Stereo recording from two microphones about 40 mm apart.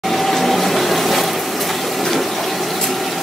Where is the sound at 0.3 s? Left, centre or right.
Centre.